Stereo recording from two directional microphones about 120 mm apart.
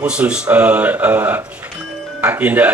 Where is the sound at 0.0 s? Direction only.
10° right (ahead or behind).